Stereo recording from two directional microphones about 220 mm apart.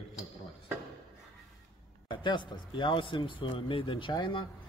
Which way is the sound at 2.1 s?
20° left (ahead or behind).